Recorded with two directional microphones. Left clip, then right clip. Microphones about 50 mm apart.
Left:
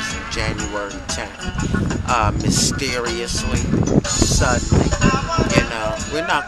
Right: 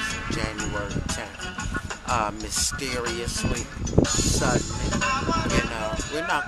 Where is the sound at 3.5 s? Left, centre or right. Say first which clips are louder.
Left 8 dB; right.